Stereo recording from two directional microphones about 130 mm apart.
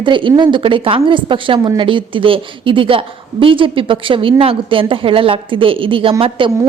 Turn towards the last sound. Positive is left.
turn(degrees=-40)  # may be behind; listen again after turning